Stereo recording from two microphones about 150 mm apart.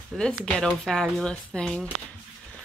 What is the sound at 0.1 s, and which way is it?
Speech, centre (ahead or behind).